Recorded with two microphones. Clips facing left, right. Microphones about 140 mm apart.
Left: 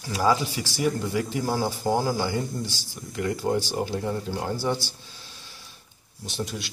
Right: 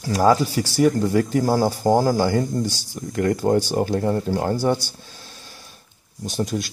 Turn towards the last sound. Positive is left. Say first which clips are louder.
# right 8 dB
turn(degrees=-45)  # may be behind; listen again after turning